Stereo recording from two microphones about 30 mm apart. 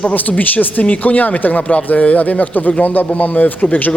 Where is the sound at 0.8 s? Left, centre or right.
Left.